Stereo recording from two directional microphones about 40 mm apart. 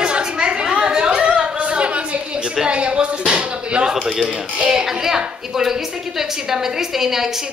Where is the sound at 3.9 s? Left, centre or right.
Centre.